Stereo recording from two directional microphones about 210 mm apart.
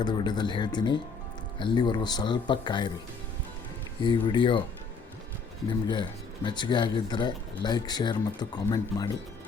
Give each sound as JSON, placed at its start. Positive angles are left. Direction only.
{"t": 0.0, "sound": "speech", "side_deg": 20}
{"t": 4.0, "sound": "speech", "side_deg": 20}
{"t": 5.9, "sound": "speech", "side_deg": 20}